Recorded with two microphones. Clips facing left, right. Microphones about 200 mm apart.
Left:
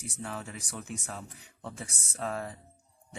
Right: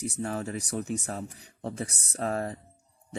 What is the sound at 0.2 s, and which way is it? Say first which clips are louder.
Speech: right 6 dB; 40° right (ahead or behind).